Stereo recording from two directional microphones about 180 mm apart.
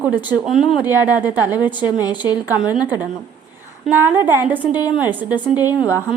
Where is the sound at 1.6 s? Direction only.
25° left (ahead or behind).